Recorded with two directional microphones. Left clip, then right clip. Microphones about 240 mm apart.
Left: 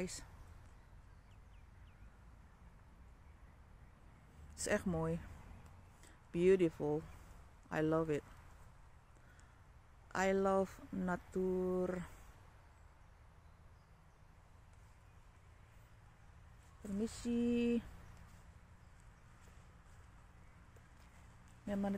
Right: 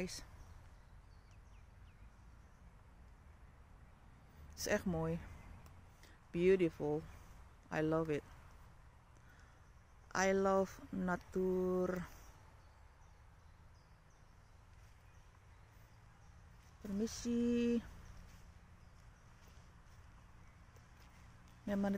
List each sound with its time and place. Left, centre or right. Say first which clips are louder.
0.0 s speech: even; centre
4.6 s speech: even; centre
10.0 s speech: right 1 dB; centre
17.0 s speech: even; centre
21.6 s speech: right 2 dB; centre